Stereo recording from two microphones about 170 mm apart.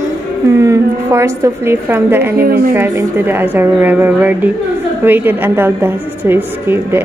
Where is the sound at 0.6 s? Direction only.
20° right (ahead or behind).